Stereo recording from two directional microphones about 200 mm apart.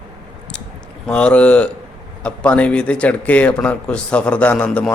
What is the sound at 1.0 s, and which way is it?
Speech, 5° left (ahead or behind).